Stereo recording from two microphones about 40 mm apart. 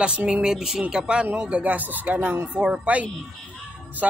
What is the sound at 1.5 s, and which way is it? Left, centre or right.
Speech, right.